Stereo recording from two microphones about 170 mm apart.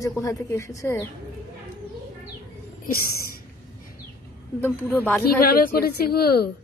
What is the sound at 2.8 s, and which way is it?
Speech, 60° left (ahead or behind).